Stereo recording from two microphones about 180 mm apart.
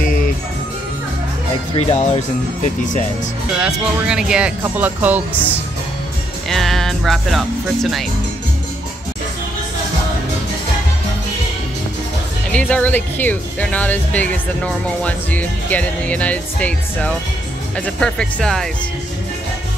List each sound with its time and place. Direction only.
0.0 s music: 50° left (ahead or behind)
1.8 s speech: 35° left (ahead or behind)
3.5 s speech: 5° right (ahead or behind)
6.5 s speech: centre (ahead or behind)
12.5 s speech: 5° left (ahead or behind)